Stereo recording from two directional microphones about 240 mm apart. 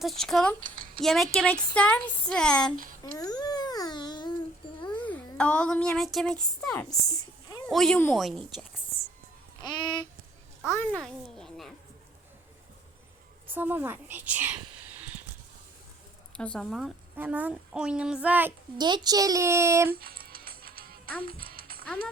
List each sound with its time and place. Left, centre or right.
0.0 s speech: centre
3.0 s babbling: centre
5.0 s speech: centre
7.1 s a sound: centre
7.7 s speech: centre
9.6 s a sound: centre
10.7 s speech: centre
13.5 s a woman's voice: centre
16.4 s a woman's voice: centre
19.9 s music: right